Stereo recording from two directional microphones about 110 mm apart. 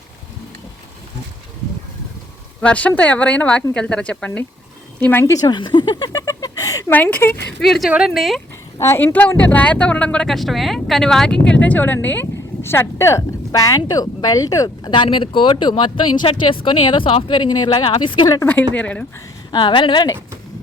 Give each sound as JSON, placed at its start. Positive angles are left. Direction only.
{"t": 2.6, "sound": "speech", "side_deg": 10}
{"t": 5.2, "sound": "speech", "side_deg": 35}
{"t": 6.9, "sound": "speech", "side_deg": 15}
{"t": 7.6, "sound": "speech", "side_deg": 0}
{"t": 8.8, "sound": "speech", "side_deg": 25}
{"t": 14.9, "sound": "speech", "side_deg": 50}
{"t": 18.7, "sound": "speech", "side_deg": 10}
{"t": 19.5, "sound": "speech", "side_deg": 45}